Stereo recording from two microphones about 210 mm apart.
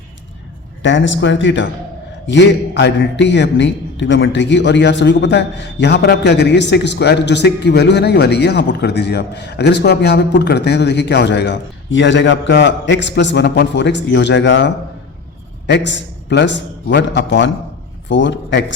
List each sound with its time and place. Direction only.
0.8 s a man's voice: 60° left (ahead or behind)